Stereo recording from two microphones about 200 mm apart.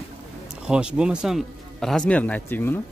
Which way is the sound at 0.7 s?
5° right (ahead or behind).